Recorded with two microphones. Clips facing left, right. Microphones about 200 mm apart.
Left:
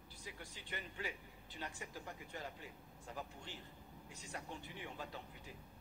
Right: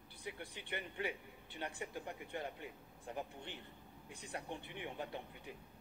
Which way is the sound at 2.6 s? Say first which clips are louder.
Right 4 dB; 20° right (ahead or behind).